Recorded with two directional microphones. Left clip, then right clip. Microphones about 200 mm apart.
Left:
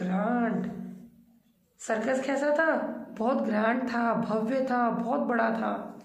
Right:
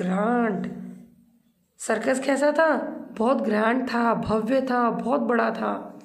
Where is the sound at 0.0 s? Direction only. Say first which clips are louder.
Right 5 dB; 45° right (ahead or behind).